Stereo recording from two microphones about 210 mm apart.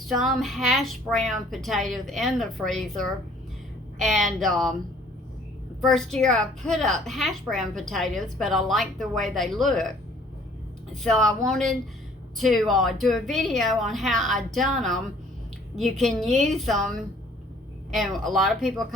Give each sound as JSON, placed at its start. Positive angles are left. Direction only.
{"t": 0.1, "sound": "a woman's voice", "side_deg": 0}
{"t": 5.8, "sound": "a woman's voice", "side_deg": 0}
{"t": 11.0, "sound": "a woman's voice", "side_deg": 0}